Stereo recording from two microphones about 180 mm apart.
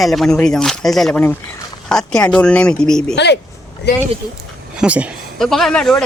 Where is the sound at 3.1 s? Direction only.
70° left (ahead or behind).